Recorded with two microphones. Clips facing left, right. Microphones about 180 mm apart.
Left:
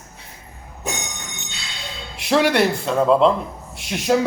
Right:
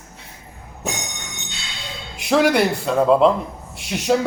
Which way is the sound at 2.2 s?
Centre (ahead or behind).